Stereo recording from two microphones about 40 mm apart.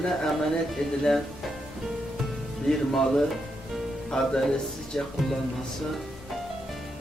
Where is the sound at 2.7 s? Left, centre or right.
Centre.